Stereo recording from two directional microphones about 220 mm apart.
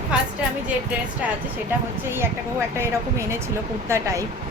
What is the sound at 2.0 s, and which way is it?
A woman's voice, 10° right (ahead or behind).